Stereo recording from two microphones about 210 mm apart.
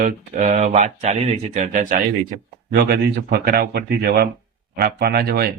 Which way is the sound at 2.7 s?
50° right (ahead or behind).